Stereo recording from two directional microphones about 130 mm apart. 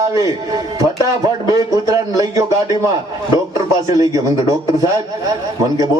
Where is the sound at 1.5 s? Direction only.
25° right (ahead or behind).